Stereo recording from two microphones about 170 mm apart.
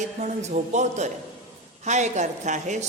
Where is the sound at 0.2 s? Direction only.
40° right (ahead or behind).